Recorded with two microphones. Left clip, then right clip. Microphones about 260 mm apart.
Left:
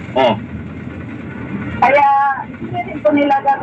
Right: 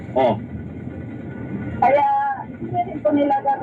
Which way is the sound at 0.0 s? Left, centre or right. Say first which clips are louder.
Left 4 dB; left.